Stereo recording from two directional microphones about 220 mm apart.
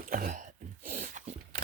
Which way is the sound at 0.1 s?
40° right (ahead or behind).